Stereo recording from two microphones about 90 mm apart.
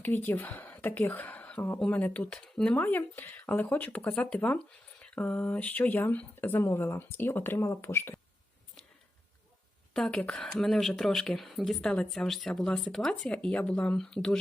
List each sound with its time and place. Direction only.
0.0 s speech: 20° left (ahead or behind)
9.9 s speech: 5° left (ahead or behind)